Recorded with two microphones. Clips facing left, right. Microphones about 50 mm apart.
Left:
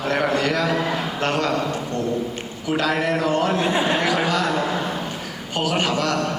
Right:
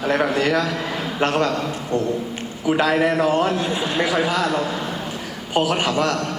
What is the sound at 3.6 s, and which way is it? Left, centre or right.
Speech, left.